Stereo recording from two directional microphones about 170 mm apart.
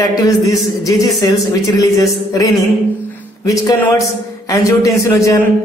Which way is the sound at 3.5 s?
20° left (ahead or behind).